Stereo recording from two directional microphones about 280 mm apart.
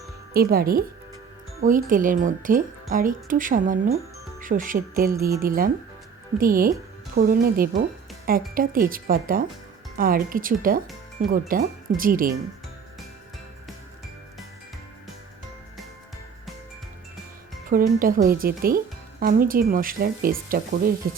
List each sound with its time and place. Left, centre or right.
0.3 s speech: right
17.7 s speech: right